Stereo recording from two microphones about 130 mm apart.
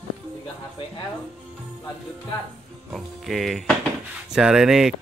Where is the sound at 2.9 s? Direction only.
Centre (ahead or behind).